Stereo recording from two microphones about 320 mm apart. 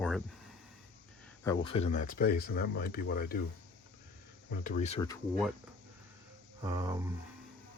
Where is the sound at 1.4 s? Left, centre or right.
Centre.